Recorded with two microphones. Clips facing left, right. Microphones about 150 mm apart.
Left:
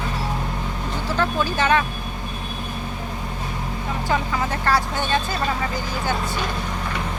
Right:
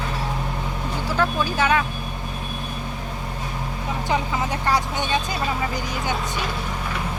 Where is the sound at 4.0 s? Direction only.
20° right (ahead or behind).